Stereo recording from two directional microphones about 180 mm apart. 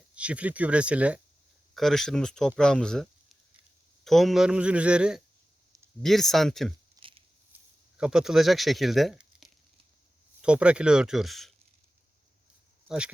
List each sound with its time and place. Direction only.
0.1 s a man's voice: 5° right (ahead or behind)
7.0 s a sound: 20° right (ahead or behind)
7.9 s a man's voice: 5° right (ahead or behind)